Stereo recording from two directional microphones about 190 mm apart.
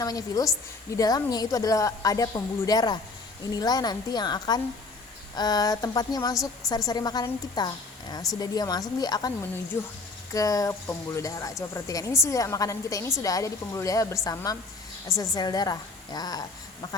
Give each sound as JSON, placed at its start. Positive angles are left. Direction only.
{"t": 0.0, "sound": "a woman's voice", "side_deg": 20}
{"t": 6.3, "sound": "a woman's voice", "side_deg": 0}
{"t": 6.7, "sound": "a woman's voice", "side_deg": 20}
{"t": 10.3, "sound": "a woman's voice", "side_deg": 20}